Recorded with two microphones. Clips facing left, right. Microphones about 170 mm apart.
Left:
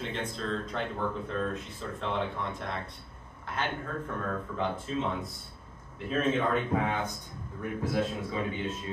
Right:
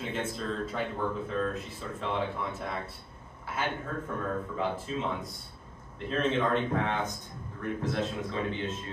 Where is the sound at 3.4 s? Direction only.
5° right (ahead or behind).